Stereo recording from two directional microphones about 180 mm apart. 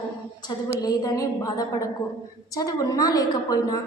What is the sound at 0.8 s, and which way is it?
A woman's voice, 20° left (ahead or behind).